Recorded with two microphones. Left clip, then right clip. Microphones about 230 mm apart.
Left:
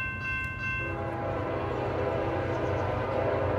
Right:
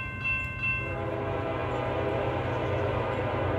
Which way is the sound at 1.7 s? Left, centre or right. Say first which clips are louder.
Right 1 dB; right.